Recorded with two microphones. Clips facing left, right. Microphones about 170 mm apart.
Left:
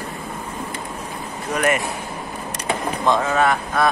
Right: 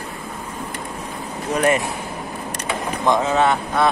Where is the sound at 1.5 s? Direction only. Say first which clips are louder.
Right 2 dB; 30° right (ahead or behind).